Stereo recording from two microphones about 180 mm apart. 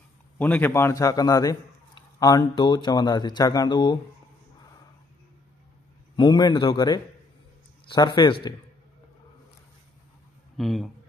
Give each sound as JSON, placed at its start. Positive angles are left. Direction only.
{"t": 0.4, "sound": "a man's voice", "side_deg": 10}
{"t": 6.1, "sound": "a man's voice", "side_deg": 25}
{"t": 10.6, "sound": "speech", "side_deg": 0}